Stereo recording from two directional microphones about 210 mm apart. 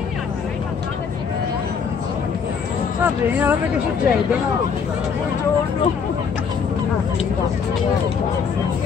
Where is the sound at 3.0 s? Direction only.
10° right (ahead or behind).